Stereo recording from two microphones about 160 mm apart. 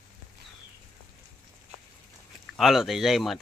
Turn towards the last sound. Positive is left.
turn(degrees=0)  # may be behind; listen again after turning